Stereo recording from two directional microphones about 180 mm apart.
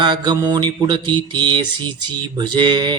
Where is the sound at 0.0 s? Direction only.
25° right (ahead or behind).